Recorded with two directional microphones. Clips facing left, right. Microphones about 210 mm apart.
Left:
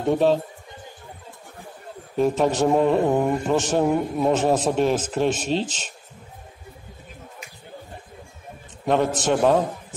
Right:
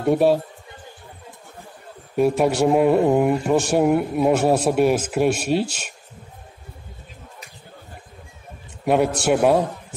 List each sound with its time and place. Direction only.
0.0 s speech: 10° right (ahead or behind)
2.1 s speech: 10° right (ahead or behind)
8.8 s speech: 10° right (ahead or behind)